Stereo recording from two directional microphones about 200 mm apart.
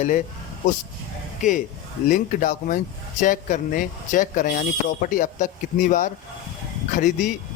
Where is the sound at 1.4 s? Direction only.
40° left (ahead or behind).